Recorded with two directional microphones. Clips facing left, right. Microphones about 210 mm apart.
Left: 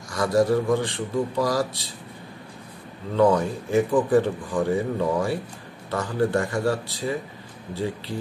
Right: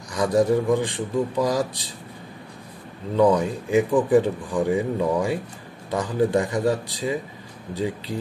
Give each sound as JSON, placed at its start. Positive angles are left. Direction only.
{"t": 0.1, "sound": "speech", "side_deg": -15}
{"t": 3.2, "sound": "speech", "side_deg": -15}